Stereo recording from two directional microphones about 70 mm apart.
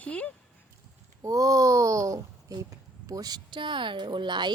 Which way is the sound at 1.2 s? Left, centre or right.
Right.